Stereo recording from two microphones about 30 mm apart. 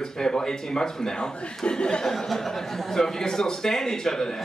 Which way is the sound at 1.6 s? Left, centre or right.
Left.